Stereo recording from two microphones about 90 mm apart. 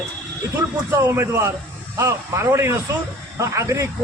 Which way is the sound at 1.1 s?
25° right (ahead or behind).